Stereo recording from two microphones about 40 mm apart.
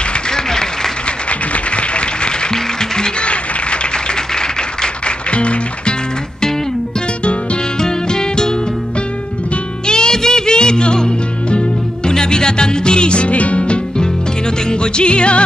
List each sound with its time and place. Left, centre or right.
0.3 s applause: centre
1.5 s a sound: left
2.5 s music: centre
3.2 s a sound: left
7.8 s music: centre
9.8 s music: centre